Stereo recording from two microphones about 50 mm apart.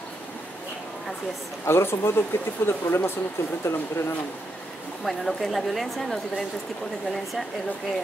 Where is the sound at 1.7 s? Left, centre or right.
Left.